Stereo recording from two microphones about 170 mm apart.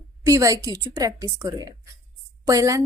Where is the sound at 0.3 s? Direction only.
20° right (ahead or behind).